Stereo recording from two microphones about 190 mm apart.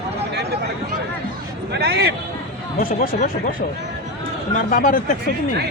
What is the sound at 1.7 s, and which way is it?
Speech, 60° right (ahead or behind).